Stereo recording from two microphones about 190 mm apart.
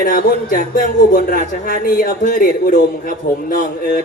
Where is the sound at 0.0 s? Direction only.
50° left (ahead or behind).